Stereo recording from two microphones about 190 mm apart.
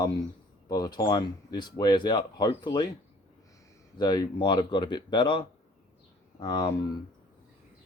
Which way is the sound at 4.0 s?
20° left (ahead or behind).